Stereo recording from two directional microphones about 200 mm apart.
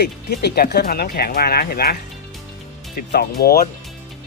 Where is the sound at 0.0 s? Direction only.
55° left (ahead or behind).